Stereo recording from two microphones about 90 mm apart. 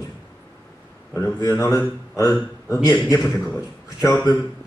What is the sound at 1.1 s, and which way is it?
A man's voice, 40° left (ahead or behind).